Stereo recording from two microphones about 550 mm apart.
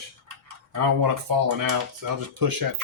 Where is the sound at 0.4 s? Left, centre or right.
Right.